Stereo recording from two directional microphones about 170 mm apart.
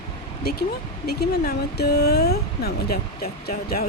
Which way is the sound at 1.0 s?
70° left (ahead or behind).